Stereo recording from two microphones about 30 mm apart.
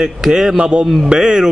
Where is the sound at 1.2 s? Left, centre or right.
Right.